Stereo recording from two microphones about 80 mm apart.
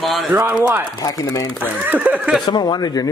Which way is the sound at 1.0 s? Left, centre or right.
Left.